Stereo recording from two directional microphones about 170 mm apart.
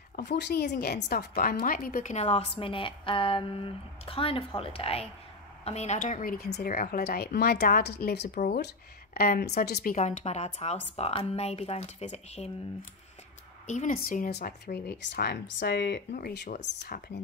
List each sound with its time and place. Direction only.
0.1 s speech: 90° left; by 2.1 s 55° left (ahead or behind)
2.1 s speech: 40° left (ahead or behind); by 8.6 s 75° left (ahead or behind)
9.1 s speech: 65° left (ahead or behind)
9.9 s speech: 45° left (ahead or behind)
13.7 s speech: 50° left (ahead or behind); by 16.0 s 80° left
16.2 s speech: 60° left (ahead or behind)